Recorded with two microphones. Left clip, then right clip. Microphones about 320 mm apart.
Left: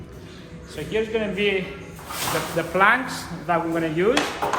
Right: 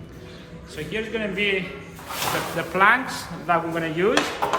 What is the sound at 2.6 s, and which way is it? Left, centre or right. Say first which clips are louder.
Speech: even; centre.